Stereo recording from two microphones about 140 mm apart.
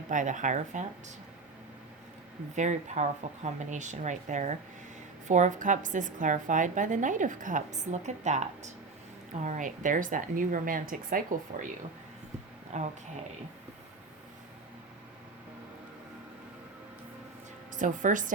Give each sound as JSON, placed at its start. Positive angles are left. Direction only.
{"t": 0.1, "sound": "a woman's voice", "side_deg": -65}
{"t": 2.6, "sound": "a woman's voice", "side_deg": -55}
{"t": 12.7, "sound": "a woman's voice", "side_deg": -55}
{"t": 17.7, "sound": "a woman's voice", "side_deg": -65}